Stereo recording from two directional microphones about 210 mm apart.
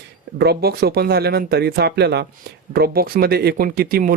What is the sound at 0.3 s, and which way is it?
Speech, 50° right (ahead or behind).